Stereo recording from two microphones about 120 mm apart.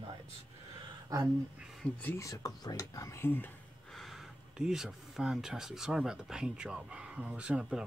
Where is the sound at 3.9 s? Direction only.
Centre (ahead or behind).